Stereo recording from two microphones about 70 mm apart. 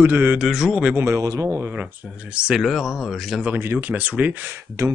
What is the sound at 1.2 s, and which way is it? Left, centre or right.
Speech, right.